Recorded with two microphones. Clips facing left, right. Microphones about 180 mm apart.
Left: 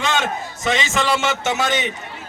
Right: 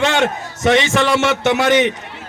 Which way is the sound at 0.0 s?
65° right (ahead or behind).